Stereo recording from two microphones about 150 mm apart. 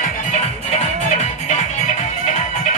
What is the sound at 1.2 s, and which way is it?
Music, 50° left (ahead or behind).